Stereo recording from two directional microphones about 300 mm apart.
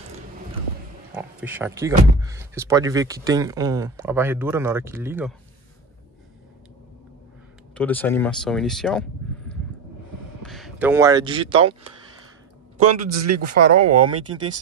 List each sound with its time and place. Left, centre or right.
1.1 s speech: centre
7.7 s speech: centre
10.4 s speech: centre
12.8 s speech: right